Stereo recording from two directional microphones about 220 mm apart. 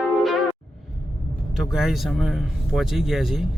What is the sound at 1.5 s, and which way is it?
A man's voice, centre (ahead or behind).